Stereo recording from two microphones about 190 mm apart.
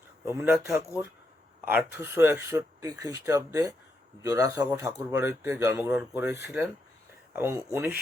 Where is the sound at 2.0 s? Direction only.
10° right (ahead or behind).